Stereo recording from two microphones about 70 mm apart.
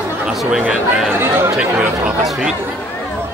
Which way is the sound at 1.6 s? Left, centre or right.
Centre.